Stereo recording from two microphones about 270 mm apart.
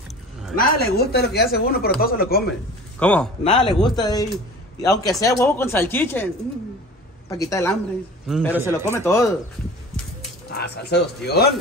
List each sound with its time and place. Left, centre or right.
0.6 s speech: left
3.0 s a man's voice: centre
3.4 s speech: centre
7.2 s speech: centre
8.5 s speech: centre
8.9 s speech: centre
10.5 s speech: left